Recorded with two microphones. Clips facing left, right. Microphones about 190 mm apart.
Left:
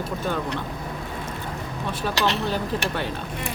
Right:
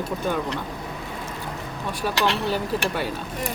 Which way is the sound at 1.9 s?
10° right (ahead or behind).